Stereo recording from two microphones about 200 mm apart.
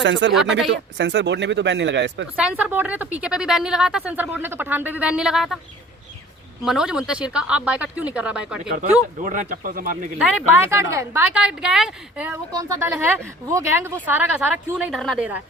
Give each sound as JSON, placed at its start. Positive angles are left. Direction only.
{"t": 0.0, "sound": "speech", "side_deg": -65}
{"t": 2.3, "sound": "a woman's voice", "side_deg": -5}
{"t": 6.7, "sound": "speech", "side_deg": -5}
{"t": 9.2, "sound": "speech", "side_deg": -40}
{"t": 10.2, "sound": "a woman's voice", "side_deg": -5}
{"t": 11.3, "sound": "speech", "side_deg": -5}
{"t": 12.5, "sound": "a woman's voice", "side_deg": -15}